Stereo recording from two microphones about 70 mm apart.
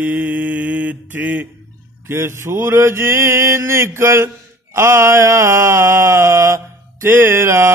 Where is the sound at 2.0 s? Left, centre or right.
Right.